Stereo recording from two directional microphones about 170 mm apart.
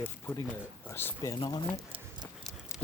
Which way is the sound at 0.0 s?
10° left (ahead or behind).